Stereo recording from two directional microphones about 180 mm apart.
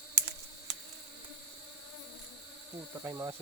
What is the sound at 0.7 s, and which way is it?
Insect, 70° right (ahead or behind).